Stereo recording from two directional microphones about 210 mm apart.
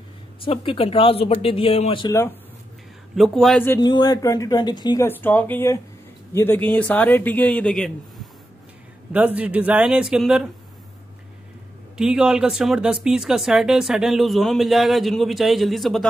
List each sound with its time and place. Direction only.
0.5 s speech: 25° left (ahead or behind)
3.2 s speech: centre (ahead or behind)
12.0 s speech: 5° right (ahead or behind)